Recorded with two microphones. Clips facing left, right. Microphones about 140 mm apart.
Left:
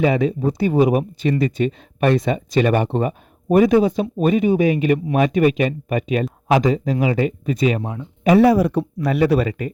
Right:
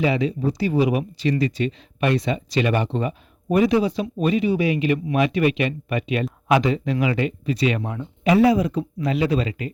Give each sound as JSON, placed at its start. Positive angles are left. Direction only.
{"t": 0.0, "sound": "speech", "side_deg": 50}
{"t": 7.4, "sound": "speech", "side_deg": 50}
{"t": 8.5, "sound": "speech", "side_deg": 70}